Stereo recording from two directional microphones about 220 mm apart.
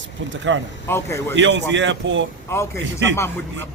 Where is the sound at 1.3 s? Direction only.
55° right (ahead or behind).